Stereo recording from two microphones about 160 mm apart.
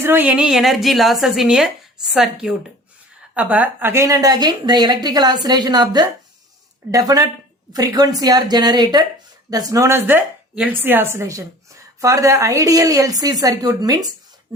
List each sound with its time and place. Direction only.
0.0 s a woman's voice: 10° right (ahead or behind)